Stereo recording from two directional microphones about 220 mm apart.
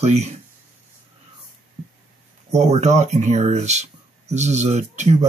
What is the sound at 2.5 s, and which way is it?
Speech, 30° right (ahead or behind).